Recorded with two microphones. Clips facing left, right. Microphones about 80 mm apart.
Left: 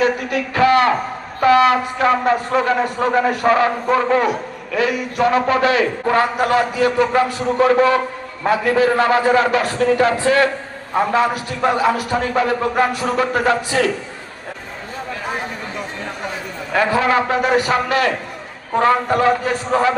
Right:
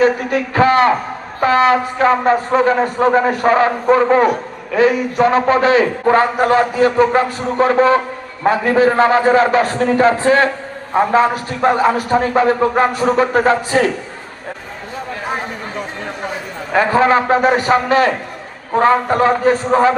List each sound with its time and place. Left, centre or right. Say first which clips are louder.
0.0 s a man's voice: right 4 dB; right
16.7 s a man's voice: right 3 dB; right